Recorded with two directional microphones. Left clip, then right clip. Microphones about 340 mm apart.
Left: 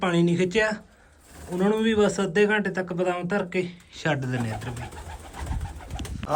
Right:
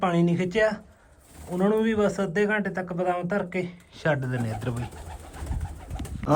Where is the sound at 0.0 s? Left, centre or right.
Centre.